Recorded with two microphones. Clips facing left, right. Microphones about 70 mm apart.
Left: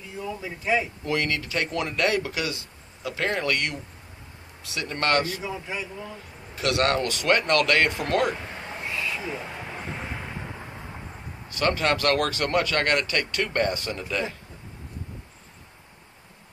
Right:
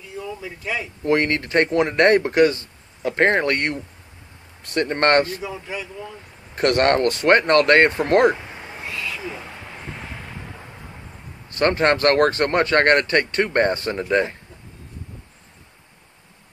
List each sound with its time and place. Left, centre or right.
1.0 s speech: right
4.6 s speech: right
6.5 s speech: right
11.5 s speech: right